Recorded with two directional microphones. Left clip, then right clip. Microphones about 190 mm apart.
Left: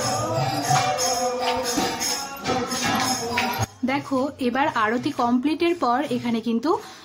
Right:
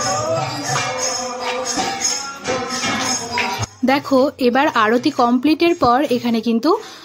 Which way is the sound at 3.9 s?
35° right (ahead or behind).